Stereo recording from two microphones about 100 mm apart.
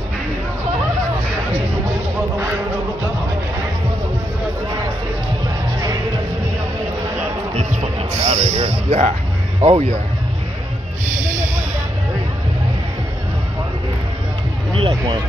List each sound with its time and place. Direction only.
8.3 s music: 90° right
9.6 s speech: 90° right
14.8 s speech: 60° right (ahead or behind)